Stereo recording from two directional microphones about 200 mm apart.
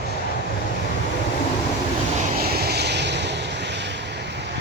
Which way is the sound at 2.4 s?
50° right (ahead or behind).